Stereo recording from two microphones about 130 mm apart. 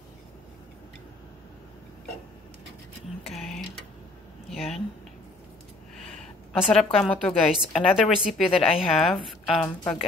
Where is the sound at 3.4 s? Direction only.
Centre (ahead or behind).